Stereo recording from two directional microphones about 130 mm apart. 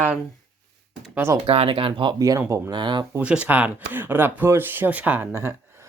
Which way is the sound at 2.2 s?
25° right (ahead or behind).